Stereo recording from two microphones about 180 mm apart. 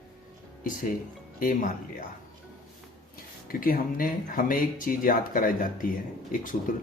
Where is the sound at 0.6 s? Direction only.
50° left (ahead or behind).